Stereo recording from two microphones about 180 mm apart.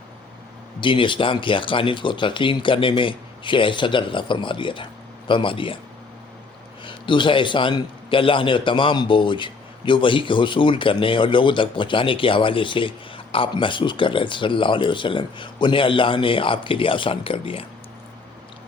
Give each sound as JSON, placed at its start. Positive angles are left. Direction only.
{"t": 0.8, "sound": "a man's voice", "side_deg": 25}
{"t": 6.8, "sound": "a man's voice", "side_deg": 25}